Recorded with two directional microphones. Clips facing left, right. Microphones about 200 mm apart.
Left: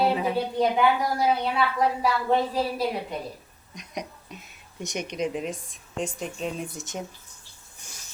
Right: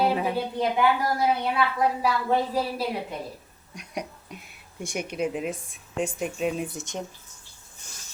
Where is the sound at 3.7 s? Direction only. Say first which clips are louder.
Right 1 dB; 10° right (ahead or behind).